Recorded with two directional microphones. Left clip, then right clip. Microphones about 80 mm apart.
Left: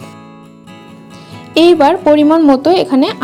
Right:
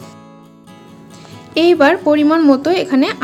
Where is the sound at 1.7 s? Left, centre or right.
Left.